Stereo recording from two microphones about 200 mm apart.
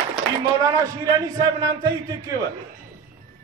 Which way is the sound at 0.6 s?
15° right (ahead or behind).